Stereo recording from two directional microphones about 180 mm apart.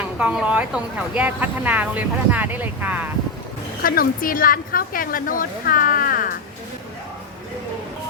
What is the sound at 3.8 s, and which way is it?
A woman's voice, 50° left (ahead or behind).